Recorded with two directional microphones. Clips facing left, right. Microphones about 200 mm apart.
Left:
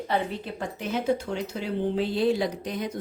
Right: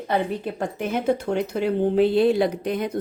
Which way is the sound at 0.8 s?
55° right (ahead or behind).